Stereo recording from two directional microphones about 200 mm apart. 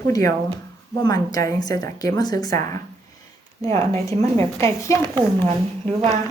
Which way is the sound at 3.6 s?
30° right (ahead or behind).